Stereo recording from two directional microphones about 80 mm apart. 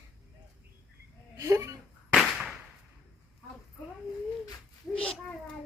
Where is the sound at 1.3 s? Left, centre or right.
Right.